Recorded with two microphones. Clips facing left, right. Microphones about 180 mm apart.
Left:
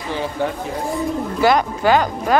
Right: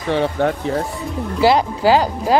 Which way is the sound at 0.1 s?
65° right (ahead or behind).